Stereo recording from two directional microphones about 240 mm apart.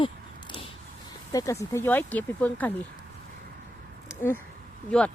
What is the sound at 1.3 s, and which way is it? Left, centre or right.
Speech, centre.